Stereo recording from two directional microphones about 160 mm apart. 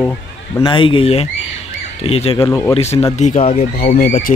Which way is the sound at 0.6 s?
35° left (ahead or behind).